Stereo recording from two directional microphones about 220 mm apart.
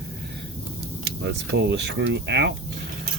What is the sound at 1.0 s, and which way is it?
Speech, 50° right (ahead or behind).